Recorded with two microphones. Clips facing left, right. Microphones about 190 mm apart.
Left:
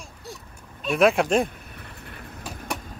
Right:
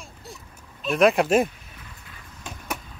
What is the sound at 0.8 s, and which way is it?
Speech, centre (ahead or behind).